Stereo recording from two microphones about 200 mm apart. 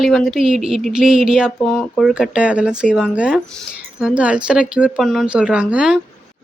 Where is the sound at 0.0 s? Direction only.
Centre (ahead or behind).